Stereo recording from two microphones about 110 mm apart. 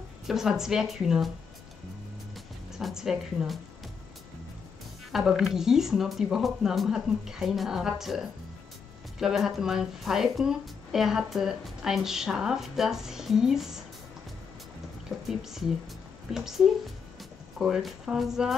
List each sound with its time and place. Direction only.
0.3 s speech: 5° right (ahead or behind)
2.7 s speech: 5° right (ahead or behind)
5.1 s speech: 5° right (ahead or behind)
15.0 s speech: 5° right (ahead or behind)